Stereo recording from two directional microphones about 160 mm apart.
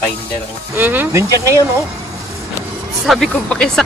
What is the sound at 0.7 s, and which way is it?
Speech, 10° right (ahead or behind).